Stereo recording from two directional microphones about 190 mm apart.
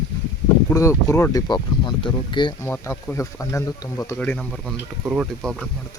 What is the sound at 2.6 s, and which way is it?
Speech, 10° left (ahead or behind).